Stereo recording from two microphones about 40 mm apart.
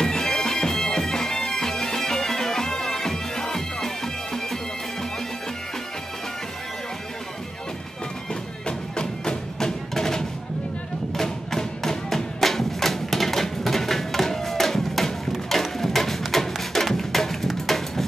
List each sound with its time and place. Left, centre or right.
0.0 s bagpipes: centre
8.6 s music: centre